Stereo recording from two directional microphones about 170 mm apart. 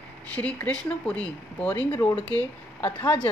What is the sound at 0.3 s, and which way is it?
Speech, 10° left (ahead or behind).